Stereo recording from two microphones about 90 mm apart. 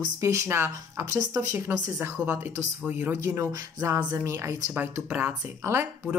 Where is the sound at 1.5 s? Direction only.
20° right (ahead or behind).